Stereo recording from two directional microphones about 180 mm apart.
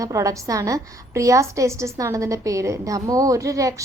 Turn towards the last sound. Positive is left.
turn(degrees=-20)  # may be behind; listen again after turning